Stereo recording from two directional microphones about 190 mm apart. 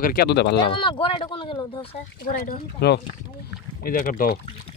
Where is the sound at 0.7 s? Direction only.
25° left (ahead or behind).